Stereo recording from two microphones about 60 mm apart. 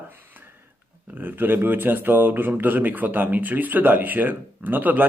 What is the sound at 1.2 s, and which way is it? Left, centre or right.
Speech, right.